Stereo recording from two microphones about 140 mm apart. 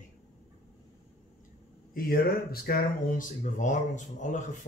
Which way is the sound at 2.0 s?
90° left.